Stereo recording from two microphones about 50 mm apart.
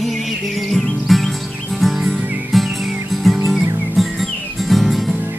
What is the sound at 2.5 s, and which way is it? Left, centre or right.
Music, centre.